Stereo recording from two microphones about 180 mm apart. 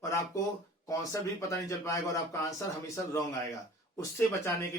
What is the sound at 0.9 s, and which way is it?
Speech, 20° left (ahead or behind).